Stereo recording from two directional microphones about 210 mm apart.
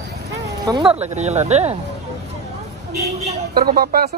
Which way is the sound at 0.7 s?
25° right (ahead or behind).